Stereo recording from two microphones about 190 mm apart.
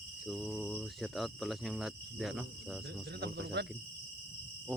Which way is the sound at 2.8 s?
60° right (ahead or behind).